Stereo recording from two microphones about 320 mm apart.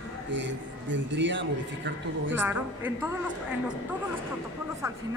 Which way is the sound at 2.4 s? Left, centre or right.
Centre.